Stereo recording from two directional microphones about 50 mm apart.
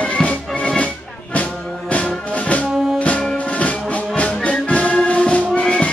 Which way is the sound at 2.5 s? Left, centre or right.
Left.